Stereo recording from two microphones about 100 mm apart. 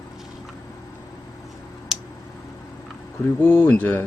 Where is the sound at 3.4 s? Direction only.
20° left (ahead or behind).